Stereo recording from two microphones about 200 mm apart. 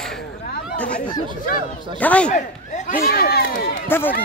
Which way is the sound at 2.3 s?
40° left (ahead or behind).